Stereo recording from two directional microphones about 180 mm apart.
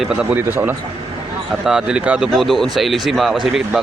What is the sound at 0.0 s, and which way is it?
A man's voice, 5° right (ahead or behind).